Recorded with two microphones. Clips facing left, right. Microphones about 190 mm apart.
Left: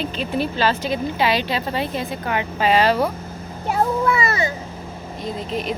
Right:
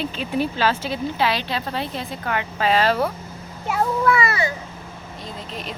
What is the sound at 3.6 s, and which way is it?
Speech, 30° left (ahead or behind).